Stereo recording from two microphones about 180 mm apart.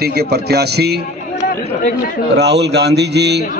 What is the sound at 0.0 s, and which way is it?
A man's voice, 60° right (ahead or behind).